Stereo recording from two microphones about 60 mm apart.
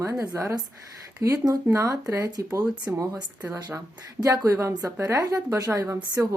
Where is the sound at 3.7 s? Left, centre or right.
Right.